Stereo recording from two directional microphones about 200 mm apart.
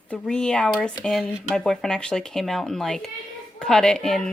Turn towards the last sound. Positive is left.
turn(degrees=5)  # may be behind; listen again after turning